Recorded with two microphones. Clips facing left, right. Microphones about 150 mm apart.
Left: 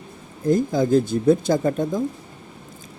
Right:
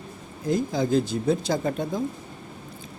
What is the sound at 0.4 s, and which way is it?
Speech, 50° left (ahead or behind).